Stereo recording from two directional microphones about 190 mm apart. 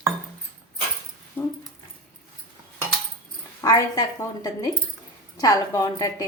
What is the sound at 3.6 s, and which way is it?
A woman's voice, 20° left (ahead or behind).